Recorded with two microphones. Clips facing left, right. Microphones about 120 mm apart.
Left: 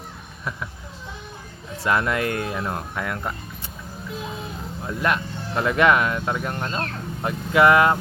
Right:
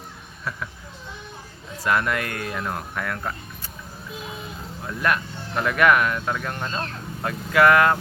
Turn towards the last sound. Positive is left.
turn(degrees=20)  # may be behind; listen again after turning